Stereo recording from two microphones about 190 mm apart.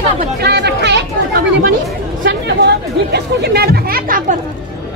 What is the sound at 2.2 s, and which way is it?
Speech, 60° right (ahead or behind).